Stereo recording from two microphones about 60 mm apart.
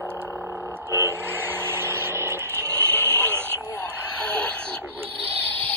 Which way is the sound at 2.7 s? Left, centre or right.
Left.